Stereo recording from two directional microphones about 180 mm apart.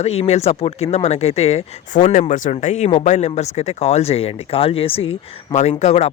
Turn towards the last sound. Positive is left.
turn(degrees=35)  # may be behind; listen again after turning